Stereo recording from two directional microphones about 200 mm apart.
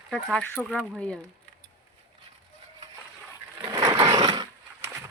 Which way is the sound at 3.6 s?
20° right (ahead or behind).